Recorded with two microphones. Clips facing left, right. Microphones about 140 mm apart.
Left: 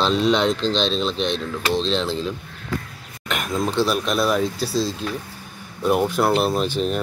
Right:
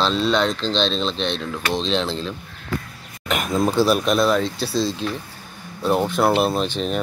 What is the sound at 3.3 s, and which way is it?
Speech, 5° right (ahead or behind).